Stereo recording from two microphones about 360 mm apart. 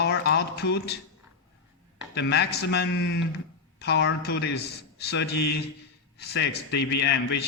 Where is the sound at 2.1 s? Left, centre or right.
Left.